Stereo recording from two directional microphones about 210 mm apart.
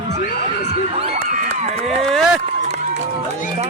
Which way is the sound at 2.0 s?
Centre (ahead or behind).